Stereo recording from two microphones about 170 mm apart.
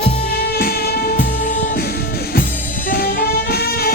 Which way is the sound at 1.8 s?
65° left (ahead or behind).